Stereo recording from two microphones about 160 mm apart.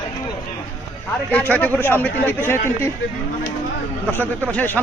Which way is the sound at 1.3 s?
10° left (ahead or behind).